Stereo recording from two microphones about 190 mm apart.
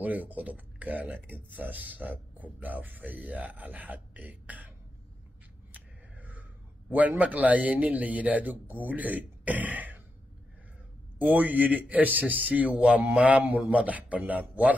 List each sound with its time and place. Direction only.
0.0 s speech: 10° right (ahead or behind)
5.7 s scissors: 10° right (ahead or behind)
6.9 s speech: 10° right (ahead or behind)
11.1 s speech: 10° right (ahead or behind)